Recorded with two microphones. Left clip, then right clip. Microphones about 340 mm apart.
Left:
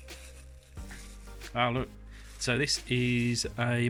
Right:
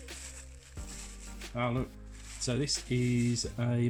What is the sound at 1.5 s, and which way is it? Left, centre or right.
Speech, left.